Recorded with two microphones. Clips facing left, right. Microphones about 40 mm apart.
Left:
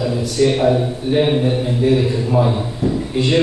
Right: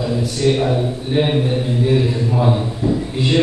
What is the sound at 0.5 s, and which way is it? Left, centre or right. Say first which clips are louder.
Speech: left 2 dB; centre.